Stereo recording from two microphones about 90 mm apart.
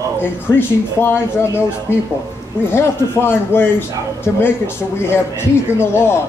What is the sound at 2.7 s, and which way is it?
Speech, 25° left (ahead or behind).